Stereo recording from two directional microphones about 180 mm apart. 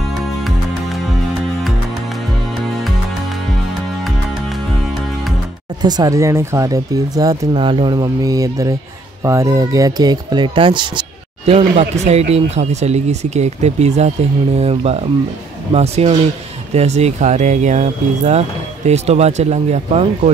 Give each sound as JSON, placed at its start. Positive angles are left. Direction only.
{"t": 5.8, "sound": "speech", "side_deg": -20}